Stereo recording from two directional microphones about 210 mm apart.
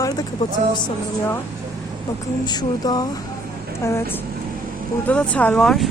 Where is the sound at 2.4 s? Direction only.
20° left (ahead or behind).